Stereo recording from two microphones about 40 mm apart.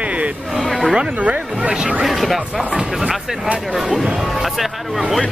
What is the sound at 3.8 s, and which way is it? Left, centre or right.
Speech, centre.